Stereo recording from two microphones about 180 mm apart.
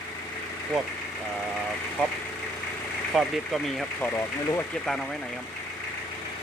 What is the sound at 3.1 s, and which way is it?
Speech, centre (ahead or behind).